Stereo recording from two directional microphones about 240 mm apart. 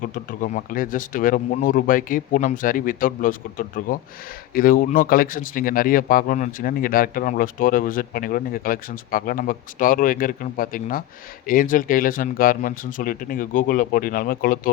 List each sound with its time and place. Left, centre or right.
0.0 s speech: left